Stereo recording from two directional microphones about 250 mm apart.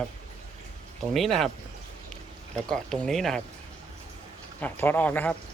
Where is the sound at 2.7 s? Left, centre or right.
Centre.